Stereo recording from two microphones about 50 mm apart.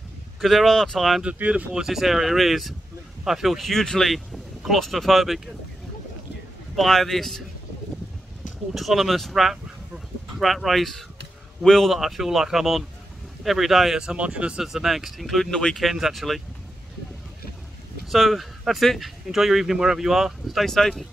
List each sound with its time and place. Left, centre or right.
0.4 s speech: centre
0.7 s speech: centre
1.2 s speech: right
1.7 s speech: centre
6.8 s speech: centre
8.7 s speech: centre
11.9 s speech: centre
14.0 s speech: right
14.6 s speech: centre
15.5 s speech: centre
15.8 s speech: centre
18.1 s speech: centre
20.6 s speech: centre